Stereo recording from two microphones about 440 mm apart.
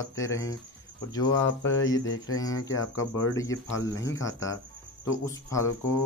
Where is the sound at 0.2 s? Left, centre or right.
Centre.